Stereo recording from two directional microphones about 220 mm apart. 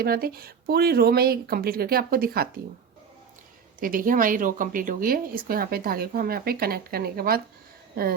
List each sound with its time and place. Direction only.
0.0 s speech: 45° right (ahead or behind)
3.8 s speech: 40° right (ahead or behind)